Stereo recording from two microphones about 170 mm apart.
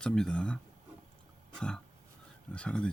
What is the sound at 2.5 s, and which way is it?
Speech, 5° left (ahead or behind).